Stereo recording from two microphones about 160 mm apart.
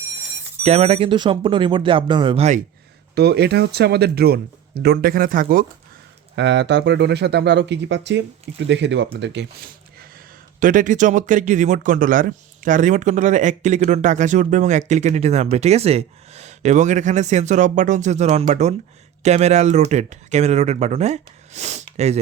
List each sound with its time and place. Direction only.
0.6 s speech: 40° right (ahead or behind)
3.2 s speech: 90° right; by 5.6 s 60° right (ahead or behind)
6.3 s speech: 90° right
10.6 s speech: 55° right (ahead or behind)